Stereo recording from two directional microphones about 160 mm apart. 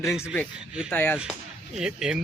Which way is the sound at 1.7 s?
5° right (ahead or behind).